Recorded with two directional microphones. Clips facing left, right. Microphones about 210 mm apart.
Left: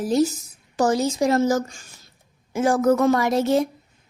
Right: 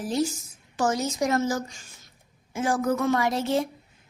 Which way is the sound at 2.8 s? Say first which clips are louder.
Left 9 dB; 80° left.